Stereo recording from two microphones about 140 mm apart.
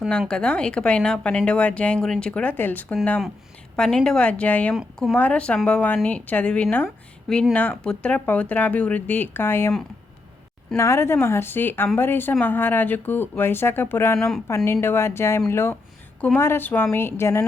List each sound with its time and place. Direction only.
0.1 s speech: 5° left (ahead or behind)
4.7 s speech: centre (ahead or behind)
5.1 s speech: 10° left (ahead or behind)
10.8 s speech: 20° left (ahead or behind)
14.2 s speech: 5° left (ahead or behind)
14.4 s speech: 20° left (ahead or behind)